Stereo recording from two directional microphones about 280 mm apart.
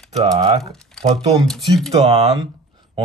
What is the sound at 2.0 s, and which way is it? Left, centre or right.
Speech, right.